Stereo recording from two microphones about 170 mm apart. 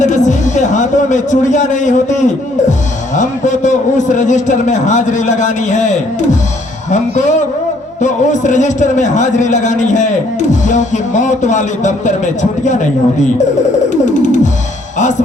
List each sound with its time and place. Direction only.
0.0 s a man's voice: 45° left (ahead or behind)
13.9 s a man's voice: 45° left (ahead or behind)